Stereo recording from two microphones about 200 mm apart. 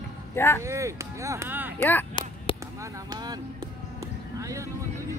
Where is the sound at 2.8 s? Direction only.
20° right (ahead or behind).